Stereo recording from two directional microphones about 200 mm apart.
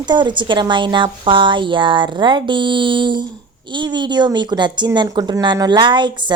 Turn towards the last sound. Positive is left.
turn(degrees=-25)  # may be behind; listen again after turning